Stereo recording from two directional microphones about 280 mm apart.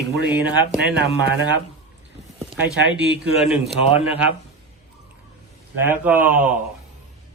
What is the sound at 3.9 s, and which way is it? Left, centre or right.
Speech, left.